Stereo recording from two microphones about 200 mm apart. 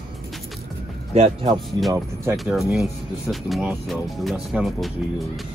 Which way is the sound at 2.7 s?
Centre (ahead or behind).